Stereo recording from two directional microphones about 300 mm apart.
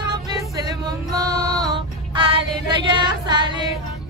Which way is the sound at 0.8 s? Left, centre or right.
Centre.